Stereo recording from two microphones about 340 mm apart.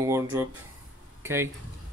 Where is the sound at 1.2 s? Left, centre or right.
Centre.